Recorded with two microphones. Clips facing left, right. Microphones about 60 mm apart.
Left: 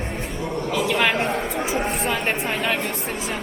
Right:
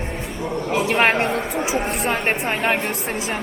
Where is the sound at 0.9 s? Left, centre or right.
Right.